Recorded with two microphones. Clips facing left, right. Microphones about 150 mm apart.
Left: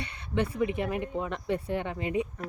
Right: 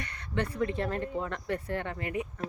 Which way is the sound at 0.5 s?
15° left (ahead or behind).